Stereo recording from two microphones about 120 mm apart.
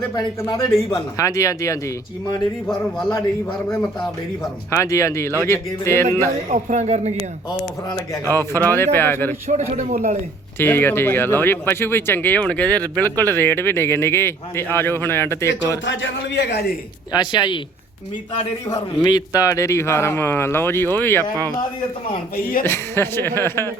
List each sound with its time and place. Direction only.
0.4 s speech: 30° left (ahead or behind)
4.7 s speech: 25° left (ahead or behind)
6.5 s a man's voice: 80° right
8.4 s speech: 20° left (ahead or behind)
9.5 s a man's voice: 90° right
10.6 s speech: 15° left (ahead or behind)
17.1 s speech: 35° left (ahead or behind)
18.7 s speech: 35° left (ahead or behind); by 21.2 s 15° left (ahead or behind)
22.6 s speech: 20° left (ahead or behind)